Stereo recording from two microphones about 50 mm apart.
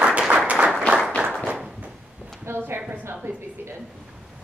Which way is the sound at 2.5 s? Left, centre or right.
Right.